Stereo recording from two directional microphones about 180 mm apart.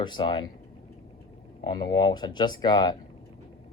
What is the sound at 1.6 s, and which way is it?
Speech, 25° left (ahead or behind).